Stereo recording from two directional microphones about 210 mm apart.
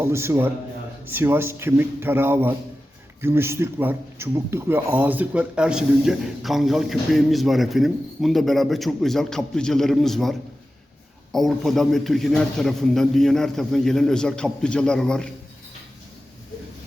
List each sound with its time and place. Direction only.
0.0 s a man's voice: 15° right (ahead or behind); by 15.3 s 5° left (ahead or behind)